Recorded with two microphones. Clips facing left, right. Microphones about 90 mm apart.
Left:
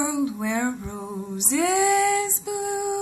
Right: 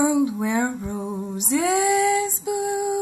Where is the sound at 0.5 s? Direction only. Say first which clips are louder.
Right 3 dB; 15° right (ahead or behind).